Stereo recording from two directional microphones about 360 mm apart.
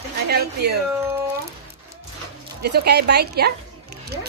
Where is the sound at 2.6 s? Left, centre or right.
Right.